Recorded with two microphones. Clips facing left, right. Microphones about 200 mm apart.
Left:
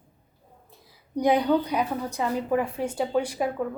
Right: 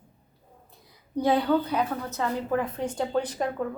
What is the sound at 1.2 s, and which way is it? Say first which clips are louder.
A woman's voice: left 1 dB; 15° left (ahead or behind).